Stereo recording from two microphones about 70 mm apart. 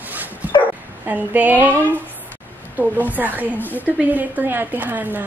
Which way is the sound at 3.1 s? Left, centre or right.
Right.